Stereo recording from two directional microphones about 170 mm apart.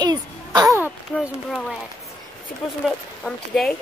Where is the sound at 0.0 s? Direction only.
25° right (ahead or behind).